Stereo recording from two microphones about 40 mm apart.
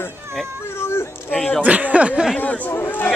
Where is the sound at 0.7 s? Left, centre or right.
Left.